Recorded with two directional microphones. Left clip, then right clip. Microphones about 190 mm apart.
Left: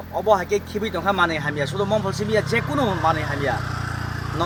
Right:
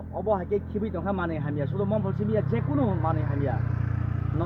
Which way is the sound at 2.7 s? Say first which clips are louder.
Left 7 dB; 45° left (ahead or behind).